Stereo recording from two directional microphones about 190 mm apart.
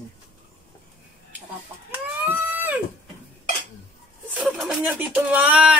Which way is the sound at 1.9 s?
10° right (ahead or behind).